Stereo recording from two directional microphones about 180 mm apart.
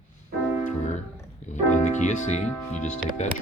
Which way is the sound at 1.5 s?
40° left (ahead or behind).